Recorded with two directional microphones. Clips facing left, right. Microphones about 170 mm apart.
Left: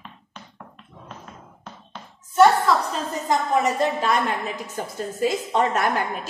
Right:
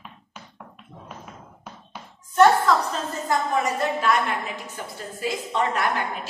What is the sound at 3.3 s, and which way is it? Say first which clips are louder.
Speech: left 3 dB; 25° left (ahead or behind).